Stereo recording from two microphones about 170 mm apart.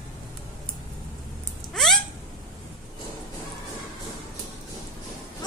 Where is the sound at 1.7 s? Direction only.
Centre (ahead or behind).